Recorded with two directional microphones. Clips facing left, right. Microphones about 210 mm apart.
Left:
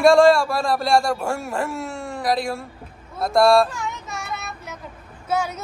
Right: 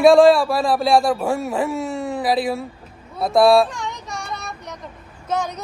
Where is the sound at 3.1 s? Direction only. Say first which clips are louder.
Right 2 dB; centre (ahead or behind).